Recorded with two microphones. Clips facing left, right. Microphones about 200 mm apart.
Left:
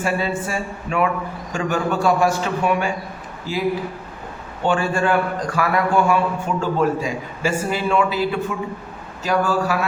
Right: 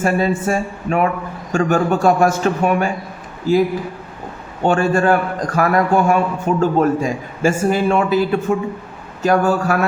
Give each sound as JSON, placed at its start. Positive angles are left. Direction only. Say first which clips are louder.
{"t": 0.0, "sound": "a man's voice", "louder": "right 5 dB", "side_deg": -45}
{"t": 4.6, "sound": "a man's voice", "louder": "right 5 dB", "side_deg": -45}